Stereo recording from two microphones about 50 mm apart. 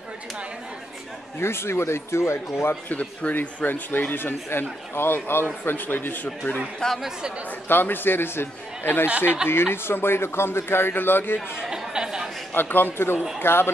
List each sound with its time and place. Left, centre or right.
1.4 s speech: left
2.9 s speech: left
3.3 s speech: left
6.8 s speech: centre
7.6 s speech: left
11.5 s chatter: centre
12.5 s speech: left